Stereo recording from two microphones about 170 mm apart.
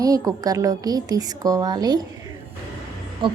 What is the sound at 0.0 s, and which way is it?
A woman's voice, 20° right (ahead or behind).